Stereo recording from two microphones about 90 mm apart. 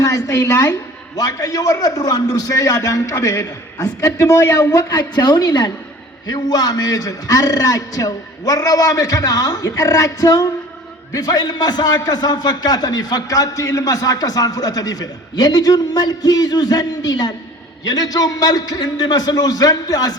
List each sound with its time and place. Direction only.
0.0 s a man's voice: 40° left (ahead or behind)
1.1 s a man's voice: 45° left (ahead or behind)